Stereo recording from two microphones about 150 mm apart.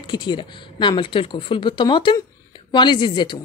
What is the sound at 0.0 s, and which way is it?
Speech, 30° left (ahead or behind).